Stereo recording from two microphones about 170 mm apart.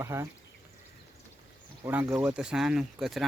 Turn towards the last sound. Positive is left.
turn(degrees=0)  # may be behind; listen again after turning